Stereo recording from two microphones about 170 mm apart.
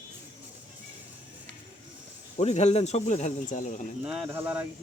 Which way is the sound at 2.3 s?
40° left (ahead or behind).